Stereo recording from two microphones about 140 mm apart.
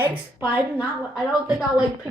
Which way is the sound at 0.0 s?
15° right (ahead or behind).